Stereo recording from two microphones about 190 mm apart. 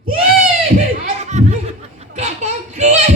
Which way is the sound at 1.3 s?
35° right (ahead or behind).